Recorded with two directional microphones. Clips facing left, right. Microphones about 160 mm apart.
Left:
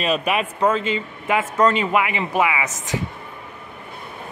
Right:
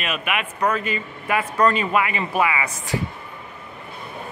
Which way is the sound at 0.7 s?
20° left (ahead or behind).